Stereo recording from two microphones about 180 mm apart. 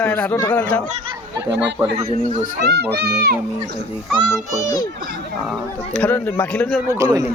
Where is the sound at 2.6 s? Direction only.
65° right (ahead or behind).